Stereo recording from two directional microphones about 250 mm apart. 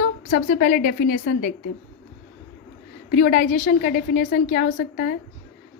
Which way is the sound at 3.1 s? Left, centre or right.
Left.